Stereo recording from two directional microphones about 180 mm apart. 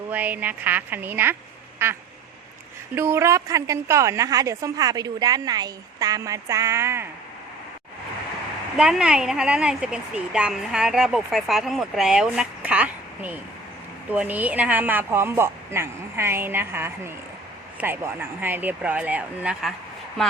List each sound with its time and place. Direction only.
0.1 s a woman's voice: 10° right (ahead or behind)
8.8 s a woman's voice: 5° right (ahead or behind)